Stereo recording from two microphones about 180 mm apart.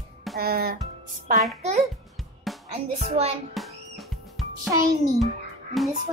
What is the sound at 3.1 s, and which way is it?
Speech, 35° right (ahead or behind).